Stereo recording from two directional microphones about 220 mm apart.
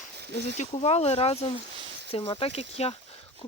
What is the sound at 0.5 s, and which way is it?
Speech, 30° left (ahead or behind).